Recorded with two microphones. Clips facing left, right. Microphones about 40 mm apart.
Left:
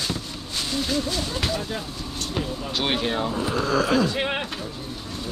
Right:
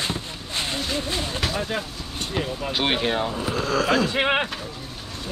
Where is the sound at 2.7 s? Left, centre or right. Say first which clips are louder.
Right 2 dB; centre.